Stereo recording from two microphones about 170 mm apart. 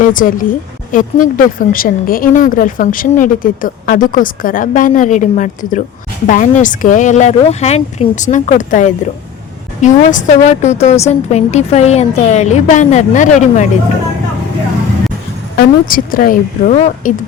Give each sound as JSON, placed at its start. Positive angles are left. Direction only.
{"t": 0.1, "sound": "a woman's voice", "side_deg": 55}
{"t": 15.5, "sound": "speech", "side_deg": 55}
{"t": 16.7, "sound": "a woman's voice", "side_deg": 40}